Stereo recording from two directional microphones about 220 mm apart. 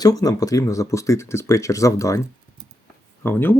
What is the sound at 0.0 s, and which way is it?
Speech, 15° left (ahead or behind).